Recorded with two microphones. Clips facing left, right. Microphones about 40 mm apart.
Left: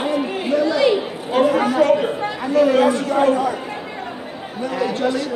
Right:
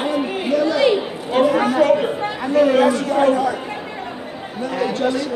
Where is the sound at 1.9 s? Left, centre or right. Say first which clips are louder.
Even; centre.